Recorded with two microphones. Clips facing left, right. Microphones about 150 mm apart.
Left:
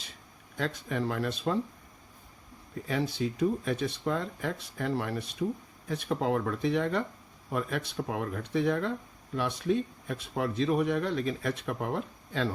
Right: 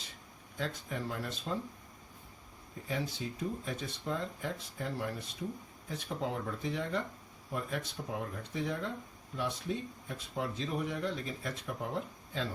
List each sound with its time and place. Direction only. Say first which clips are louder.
0.5 s speech: left 6 dB; 75° left (ahead or behind)
2.8 s speech: left 7 dB; 75° left (ahead or behind)